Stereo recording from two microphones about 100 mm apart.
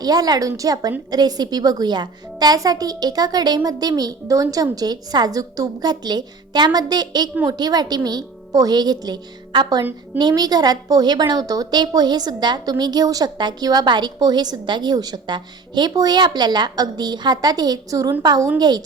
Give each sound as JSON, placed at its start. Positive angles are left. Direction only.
{"t": 0.0, "sound": "a woman's voice", "side_deg": -40}